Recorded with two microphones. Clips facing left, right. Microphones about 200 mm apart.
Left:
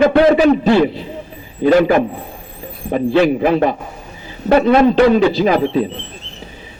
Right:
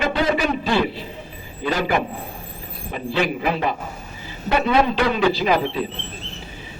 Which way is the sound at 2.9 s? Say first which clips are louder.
Left 10 dB; 50° left (ahead or behind).